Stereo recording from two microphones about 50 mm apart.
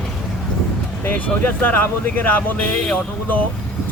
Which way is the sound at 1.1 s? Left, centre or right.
Left.